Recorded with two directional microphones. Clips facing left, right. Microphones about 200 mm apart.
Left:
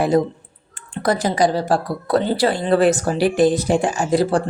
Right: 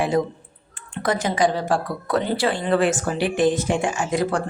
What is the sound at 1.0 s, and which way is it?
A woman's voice, 35° left (ahead or behind).